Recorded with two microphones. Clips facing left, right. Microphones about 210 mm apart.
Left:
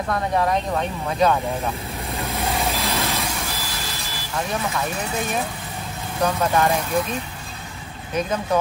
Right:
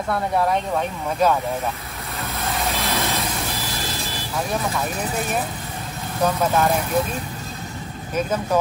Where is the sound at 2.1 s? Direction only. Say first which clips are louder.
Left 2 dB; 15° left (ahead or behind).